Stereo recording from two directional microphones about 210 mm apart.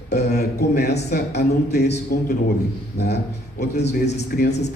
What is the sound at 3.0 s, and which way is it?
A man's voice, 50° left (ahead or behind).